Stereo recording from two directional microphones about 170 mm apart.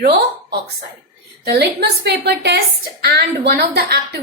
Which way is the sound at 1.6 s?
75° right (ahead or behind).